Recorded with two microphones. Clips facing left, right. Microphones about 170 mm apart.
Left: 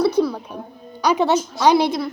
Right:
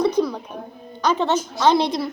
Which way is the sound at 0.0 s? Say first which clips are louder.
Left 2 dB; 5° left (ahead or behind).